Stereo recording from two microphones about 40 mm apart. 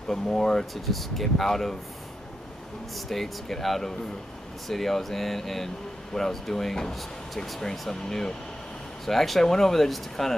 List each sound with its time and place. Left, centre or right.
0.1 s speech: centre
0.8 s speech: centre
3.1 s speech: centre
7.9 s speech: centre